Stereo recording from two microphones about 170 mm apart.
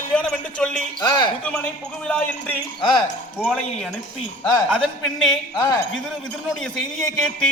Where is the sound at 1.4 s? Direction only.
10° left (ahead or behind).